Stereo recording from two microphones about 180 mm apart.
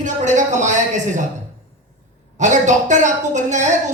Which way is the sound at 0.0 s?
45° right (ahead or behind).